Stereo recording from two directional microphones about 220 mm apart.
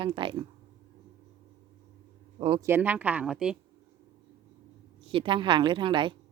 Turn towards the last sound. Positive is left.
turn(degrees=-20)  # may be behind; listen again after turning